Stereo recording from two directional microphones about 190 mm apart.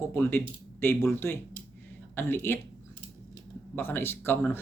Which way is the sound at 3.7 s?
10° left (ahead or behind).